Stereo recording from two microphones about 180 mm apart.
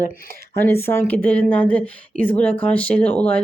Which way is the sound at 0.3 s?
55° right (ahead or behind).